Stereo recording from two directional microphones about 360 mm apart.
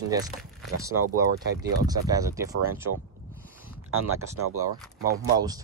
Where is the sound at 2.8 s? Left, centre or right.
Right.